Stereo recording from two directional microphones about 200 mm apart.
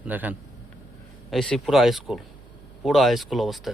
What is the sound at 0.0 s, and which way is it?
A man's voice, 10° right (ahead or behind).